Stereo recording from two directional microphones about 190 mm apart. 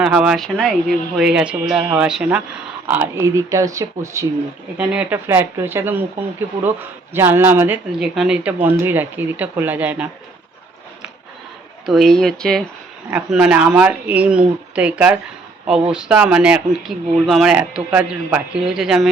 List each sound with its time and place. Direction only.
0.0 s speech: 5° right (ahead or behind)
7.1 s speech: 10° right (ahead or behind)
11.9 s speech: centre (ahead or behind)